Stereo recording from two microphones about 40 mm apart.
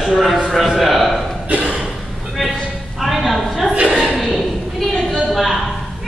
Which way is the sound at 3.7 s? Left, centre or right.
Right.